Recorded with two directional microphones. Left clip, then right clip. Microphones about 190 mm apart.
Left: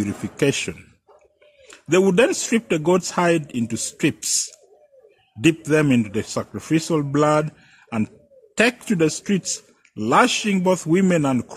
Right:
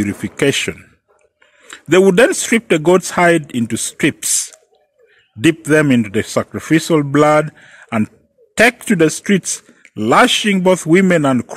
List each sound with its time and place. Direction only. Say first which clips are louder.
0.0 s a man's voice: right 5 dB; 20° right (ahead or behind)
5.4 s a man's voice: right 6 dB; 20° right (ahead or behind)